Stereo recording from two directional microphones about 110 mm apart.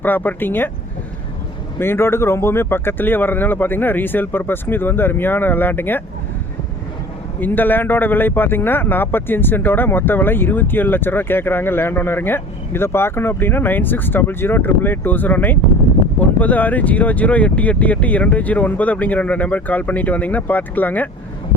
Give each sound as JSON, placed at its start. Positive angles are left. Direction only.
{"t": 0.0, "sound": "speech", "side_deg": 15}
{"t": 1.8, "sound": "a man's voice", "side_deg": 20}
{"t": 7.3, "sound": "a man's voice", "side_deg": 15}